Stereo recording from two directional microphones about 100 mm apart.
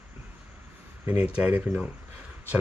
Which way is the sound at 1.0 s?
15° right (ahead or behind).